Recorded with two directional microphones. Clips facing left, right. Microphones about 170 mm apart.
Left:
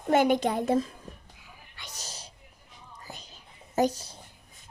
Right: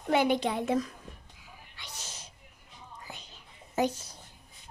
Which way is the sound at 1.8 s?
40° left (ahead or behind).